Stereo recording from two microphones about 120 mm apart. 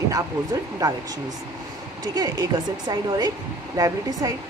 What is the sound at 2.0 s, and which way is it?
A woman's voice, 30° right (ahead or behind).